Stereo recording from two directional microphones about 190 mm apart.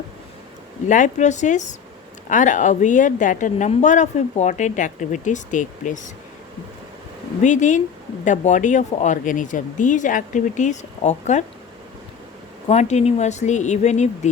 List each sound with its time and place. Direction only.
0.9 s speech: 40° left (ahead or behind)
7.4 s speech: 40° left (ahead or behind)
12.6 s speech: 35° left (ahead or behind)